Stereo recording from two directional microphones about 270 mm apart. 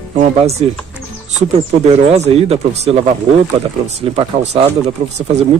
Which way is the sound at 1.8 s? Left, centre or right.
Right.